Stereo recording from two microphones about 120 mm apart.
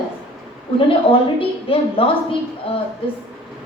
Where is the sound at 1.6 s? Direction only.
50° left (ahead or behind).